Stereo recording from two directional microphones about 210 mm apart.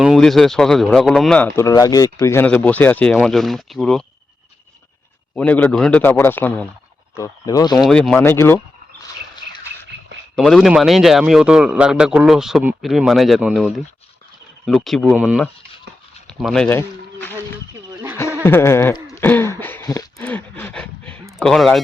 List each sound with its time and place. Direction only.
0.0 s speech: centre (ahead or behind)
5.3 s speech: 10° left (ahead or behind)
7.8 s speech: centre (ahead or behind)
10.3 s speech: centre (ahead or behind)
14.7 s speech: centre (ahead or behind)
16.2 s a sound: centre (ahead or behind)
16.6 s speech: 10° left (ahead or behind)
18.4 s a sound: 10° left (ahead or behind)
21.3 s speech: centre (ahead or behind)